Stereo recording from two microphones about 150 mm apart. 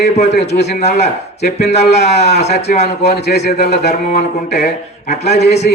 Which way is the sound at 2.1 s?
90° left.